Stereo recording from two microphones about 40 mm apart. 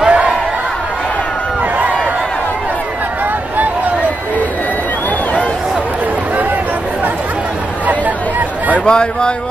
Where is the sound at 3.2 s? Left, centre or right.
Right.